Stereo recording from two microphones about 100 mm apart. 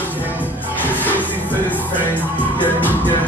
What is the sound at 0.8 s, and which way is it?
Music, 20° left (ahead or behind).